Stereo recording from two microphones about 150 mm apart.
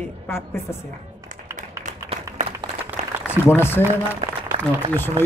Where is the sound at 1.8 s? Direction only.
50° right (ahead or behind).